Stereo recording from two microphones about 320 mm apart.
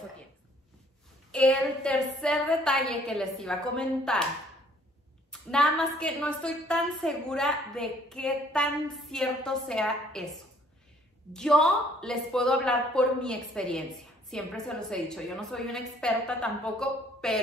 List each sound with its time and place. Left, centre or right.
1.3 s a woman's voice: centre
5.3 s a woman's voice: centre
11.3 s a woman's voice: centre